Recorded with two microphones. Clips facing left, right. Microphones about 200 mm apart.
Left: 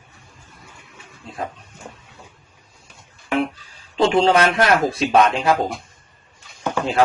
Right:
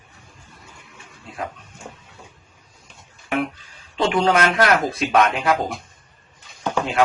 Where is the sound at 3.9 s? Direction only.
30° left (ahead or behind).